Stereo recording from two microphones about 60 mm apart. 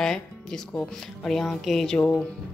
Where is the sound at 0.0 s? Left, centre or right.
Centre.